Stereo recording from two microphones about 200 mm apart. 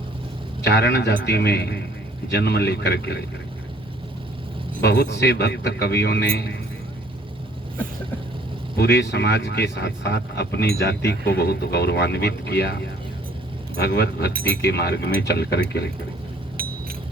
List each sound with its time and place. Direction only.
0.6 s speech: 55° left (ahead or behind)
4.8 s a man's voice: 55° left (ahead or behind)
8.7 s a man's voice: 55° left (ahead or behind)
16.6 s a sound: 45° right (ahead or behind)